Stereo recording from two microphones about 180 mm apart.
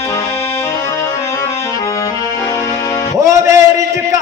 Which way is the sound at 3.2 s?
15° right (ahead or behind).